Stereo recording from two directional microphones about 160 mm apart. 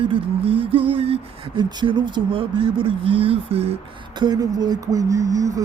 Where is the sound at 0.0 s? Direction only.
35° right (ahead or behind).